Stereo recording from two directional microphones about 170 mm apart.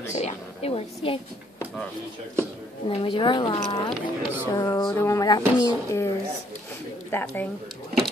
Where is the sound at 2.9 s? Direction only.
30° left (ahead or behind).